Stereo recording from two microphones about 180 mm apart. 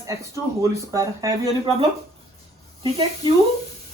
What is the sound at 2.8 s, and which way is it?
Speech, 30° right (ahead or behind).